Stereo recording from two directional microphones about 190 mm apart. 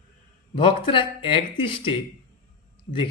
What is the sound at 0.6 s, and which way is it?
Speech, 25° left (ahead or behind).